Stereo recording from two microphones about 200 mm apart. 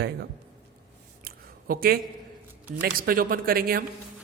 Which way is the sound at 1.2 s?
50° right (ahead or behind).